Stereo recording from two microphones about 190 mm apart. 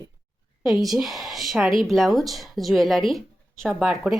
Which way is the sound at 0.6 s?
Centre (ahead or behind).